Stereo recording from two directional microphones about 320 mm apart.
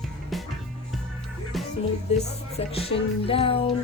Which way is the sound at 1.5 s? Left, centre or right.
Centre.